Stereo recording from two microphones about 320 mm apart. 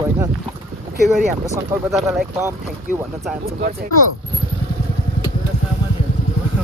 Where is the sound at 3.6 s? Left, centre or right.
Right.